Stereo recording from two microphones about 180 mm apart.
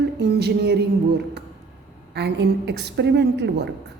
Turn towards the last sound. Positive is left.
turn(degrees=-70)  # may be behind; listen again after turning